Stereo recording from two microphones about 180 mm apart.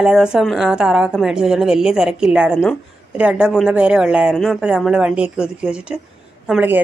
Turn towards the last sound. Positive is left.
turn(degrees=-5)  # may be behind; listen again after turning